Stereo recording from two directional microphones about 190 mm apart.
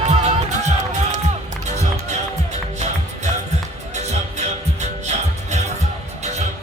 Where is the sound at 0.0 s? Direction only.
35° right (ahead or behind).